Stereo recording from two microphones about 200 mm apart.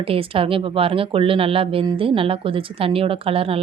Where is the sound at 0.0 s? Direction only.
30° right (ahead or behind).